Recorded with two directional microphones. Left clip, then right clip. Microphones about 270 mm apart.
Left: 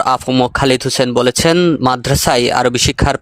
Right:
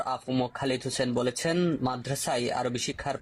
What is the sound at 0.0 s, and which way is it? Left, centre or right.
Speech, left.